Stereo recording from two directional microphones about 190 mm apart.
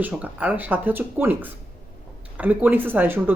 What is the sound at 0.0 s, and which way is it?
Speech, 5° right (ahead or behind).